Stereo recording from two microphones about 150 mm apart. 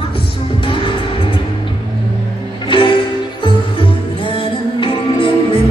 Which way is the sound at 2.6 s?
35° left (ahead or behind).